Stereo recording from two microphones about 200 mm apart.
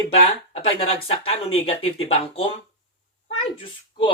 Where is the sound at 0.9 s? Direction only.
30° left (ahead or behind).